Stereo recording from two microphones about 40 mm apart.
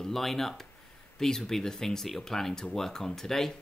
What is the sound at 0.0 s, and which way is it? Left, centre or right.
Speech, centre.